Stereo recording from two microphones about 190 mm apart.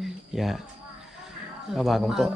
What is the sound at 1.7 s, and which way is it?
Speech, centre (ahead or behind).